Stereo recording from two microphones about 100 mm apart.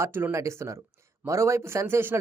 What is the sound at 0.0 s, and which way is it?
Speech, 20° right (ahead or behind).